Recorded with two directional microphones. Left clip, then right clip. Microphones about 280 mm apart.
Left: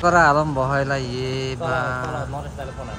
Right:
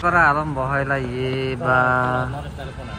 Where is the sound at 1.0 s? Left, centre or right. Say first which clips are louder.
Right 2 dB; left.